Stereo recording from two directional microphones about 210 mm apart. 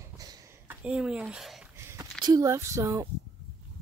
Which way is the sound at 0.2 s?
15° right (ahead or behind).